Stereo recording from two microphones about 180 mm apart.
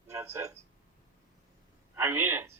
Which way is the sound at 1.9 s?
10° right (ahead or behind).